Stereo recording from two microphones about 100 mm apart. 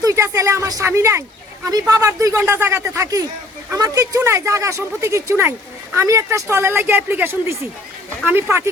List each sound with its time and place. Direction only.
0.0 s speech: 30° right (ahead or behind)
2.4 s speech: 25° right (ahead or behind)